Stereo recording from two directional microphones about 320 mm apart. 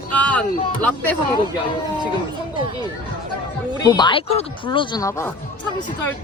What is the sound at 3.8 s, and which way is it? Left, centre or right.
Speech, centre.